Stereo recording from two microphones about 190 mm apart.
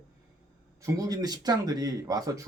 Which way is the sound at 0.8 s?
20° right (ahead or behind).